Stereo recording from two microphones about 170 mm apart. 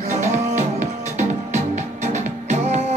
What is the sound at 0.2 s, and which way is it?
Music, 45° right (ahead or behind).